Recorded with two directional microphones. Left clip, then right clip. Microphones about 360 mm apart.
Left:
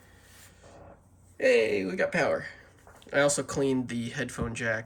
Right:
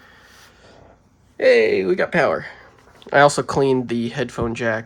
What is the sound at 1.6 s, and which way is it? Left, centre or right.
Speech, centre.